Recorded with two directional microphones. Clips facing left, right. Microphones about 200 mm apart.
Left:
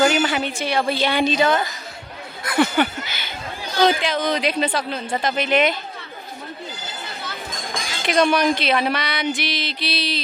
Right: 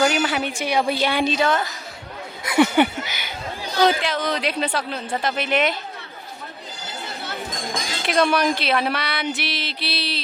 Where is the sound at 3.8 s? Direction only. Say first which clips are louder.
Left 2 dB; centre (ahead or behind).